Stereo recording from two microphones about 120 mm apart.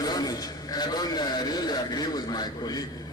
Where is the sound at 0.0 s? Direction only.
35° left (ahead or behind).